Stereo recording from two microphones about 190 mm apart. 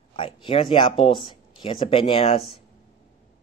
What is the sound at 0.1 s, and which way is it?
Speech, 30° left (ahead or behind).